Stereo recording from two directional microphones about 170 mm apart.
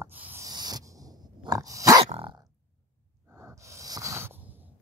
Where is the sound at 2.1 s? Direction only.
30° right (ahead or behind).